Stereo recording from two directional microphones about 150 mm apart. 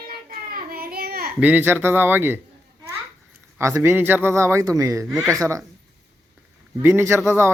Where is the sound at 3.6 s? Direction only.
15° right (ahead or behind).